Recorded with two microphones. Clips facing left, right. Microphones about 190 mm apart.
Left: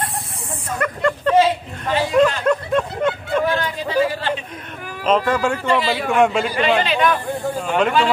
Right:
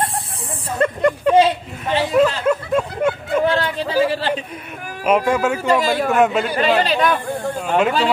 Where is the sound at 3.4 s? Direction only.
30° right (ahead or behind).